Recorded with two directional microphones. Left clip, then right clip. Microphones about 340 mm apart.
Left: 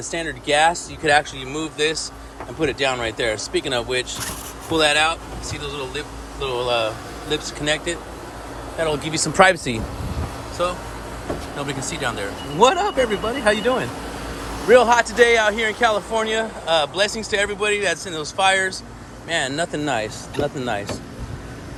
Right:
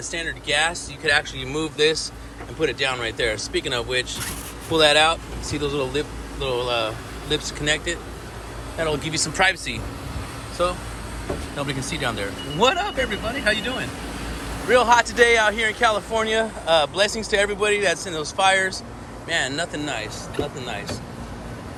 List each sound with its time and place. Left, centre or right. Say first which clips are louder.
0.1 s speech: left 3 dB; centre
1.4 s speech: right 1 dB; centre
6.5 s speech: left 2 dB; centre
10.6 s speech: even; centre; by 21.0 s left